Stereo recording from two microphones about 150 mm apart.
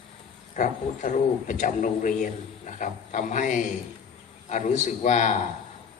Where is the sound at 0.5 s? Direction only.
55° left (ahead or behind).